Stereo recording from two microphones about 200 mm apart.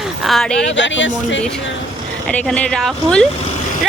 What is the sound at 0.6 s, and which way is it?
Speech, 65° left (ahead or behind).